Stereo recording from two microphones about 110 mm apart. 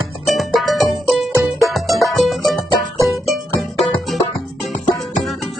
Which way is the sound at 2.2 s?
Centre (ahead or behind).